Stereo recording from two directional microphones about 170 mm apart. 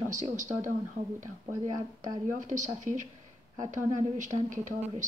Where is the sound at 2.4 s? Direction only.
45° right (ahead or behind).